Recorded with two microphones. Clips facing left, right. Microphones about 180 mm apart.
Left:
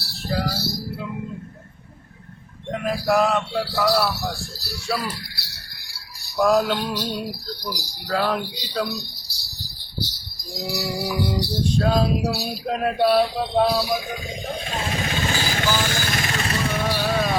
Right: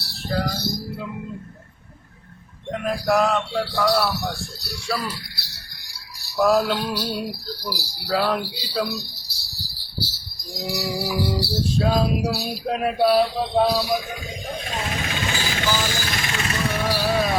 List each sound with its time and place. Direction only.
0.0 s music: centre (ahead or behind)
2.7 s a man's voice: centre (ahead or behind)
10.5 s a man's voice: centre (ahead or behind)
15.0 s vehicle: 35° left (ahead or behind)
16.7 s music: 10° right (ahead or behind)